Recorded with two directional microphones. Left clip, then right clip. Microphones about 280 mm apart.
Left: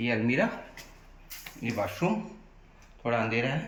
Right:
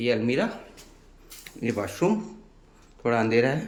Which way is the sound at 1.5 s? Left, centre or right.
Centre.